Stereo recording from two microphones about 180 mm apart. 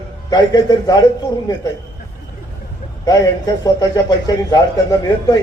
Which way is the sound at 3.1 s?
20° left (ahead or behind).